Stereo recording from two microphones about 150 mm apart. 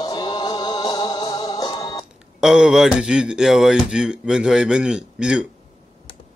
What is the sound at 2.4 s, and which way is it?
Speech, 5° right (ahead or behind).